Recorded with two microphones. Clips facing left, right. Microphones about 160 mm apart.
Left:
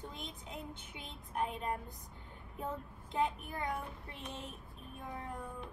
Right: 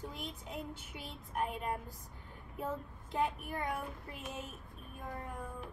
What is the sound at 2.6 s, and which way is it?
Child singing, 5° right (ahead or behind).